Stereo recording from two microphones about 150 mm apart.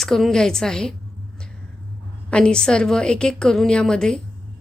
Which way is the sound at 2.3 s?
5° left (ahead or behind).